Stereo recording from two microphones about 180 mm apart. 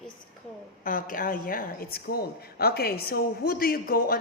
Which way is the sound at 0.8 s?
50° left (ahead or behind).